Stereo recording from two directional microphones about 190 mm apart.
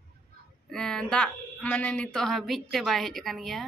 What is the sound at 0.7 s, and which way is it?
A woman's voice, 5° left (ahead or behind).